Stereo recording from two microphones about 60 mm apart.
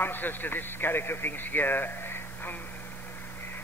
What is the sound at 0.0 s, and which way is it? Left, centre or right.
A man's voice, left.